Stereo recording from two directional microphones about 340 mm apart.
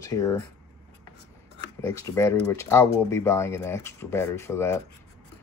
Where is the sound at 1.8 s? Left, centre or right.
Centre.